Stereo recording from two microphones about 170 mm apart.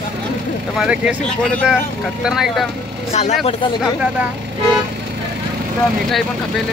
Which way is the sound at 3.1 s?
40° left (ahead or behind).